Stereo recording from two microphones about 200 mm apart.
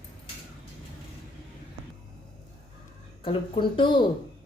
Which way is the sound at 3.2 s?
25° left (ahead or behind).